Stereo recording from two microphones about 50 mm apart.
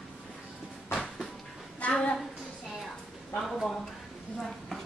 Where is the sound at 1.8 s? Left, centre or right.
Left.